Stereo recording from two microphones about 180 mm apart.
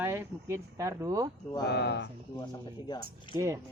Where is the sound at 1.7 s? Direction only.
65° left (ahead or behind).